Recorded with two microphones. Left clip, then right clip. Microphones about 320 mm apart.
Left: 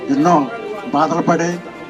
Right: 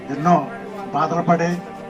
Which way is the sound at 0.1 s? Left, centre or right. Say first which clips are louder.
Left 4 dB; centre.